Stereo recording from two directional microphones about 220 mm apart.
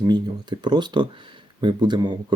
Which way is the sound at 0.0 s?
20° right (ahead or behind).